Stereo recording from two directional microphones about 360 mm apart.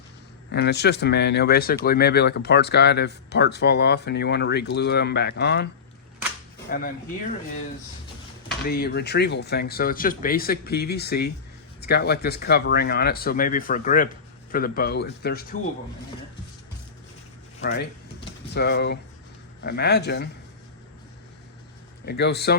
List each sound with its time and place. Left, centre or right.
0.5 s speech: left
6.7 s speech: left
8.4 s speech: left
17.6 s speech: left
22.0 s speech: left